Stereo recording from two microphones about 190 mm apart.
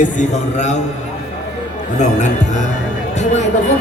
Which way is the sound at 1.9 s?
40° left (ahead or behind).